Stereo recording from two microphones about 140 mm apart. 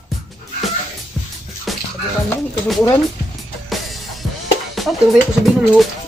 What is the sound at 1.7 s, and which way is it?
Music, centre (ahead or behind).